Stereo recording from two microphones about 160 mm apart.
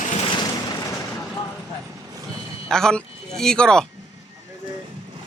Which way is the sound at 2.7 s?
5° left (ahead or behind).